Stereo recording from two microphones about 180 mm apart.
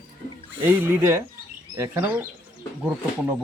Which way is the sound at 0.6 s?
10° right (ahead or behind).